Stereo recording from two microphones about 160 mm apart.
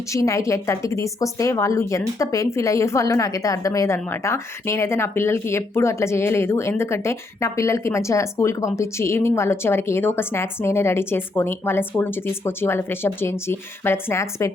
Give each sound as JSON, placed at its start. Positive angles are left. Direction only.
{"t": 0.1, "sound": "speech", "side_deg": 20}